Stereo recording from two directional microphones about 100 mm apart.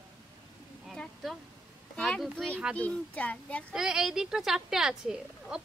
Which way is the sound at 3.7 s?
5° right (ahead or behind).